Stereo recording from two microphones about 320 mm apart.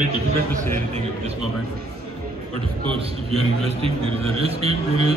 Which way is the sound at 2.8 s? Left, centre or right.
Centre.